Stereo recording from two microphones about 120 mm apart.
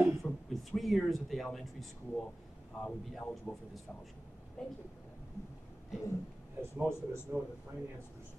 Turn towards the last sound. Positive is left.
turn(degrees=-15)  # may be behind; listen again after turning